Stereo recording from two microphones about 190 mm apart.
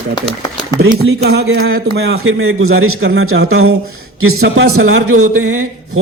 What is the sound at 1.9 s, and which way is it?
A man's voice, 65° right (ahead or behind).